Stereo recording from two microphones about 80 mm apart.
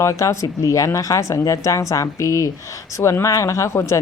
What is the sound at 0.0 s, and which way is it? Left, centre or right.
A woman's voice, left.